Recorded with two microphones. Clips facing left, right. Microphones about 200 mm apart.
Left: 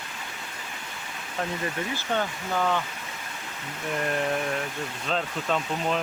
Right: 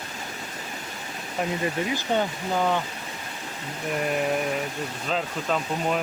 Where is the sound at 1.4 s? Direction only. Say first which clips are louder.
Right 4 dB; 15° right (ahead or behind).